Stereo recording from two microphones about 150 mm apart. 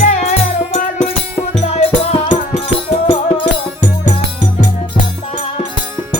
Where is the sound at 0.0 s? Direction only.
50° left (ahead or behind).